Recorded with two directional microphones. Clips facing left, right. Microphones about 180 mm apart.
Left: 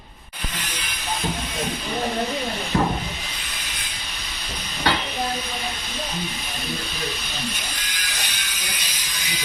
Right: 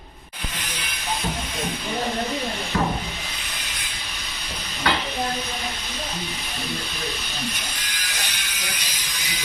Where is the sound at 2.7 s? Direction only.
25° left (ahead or behind).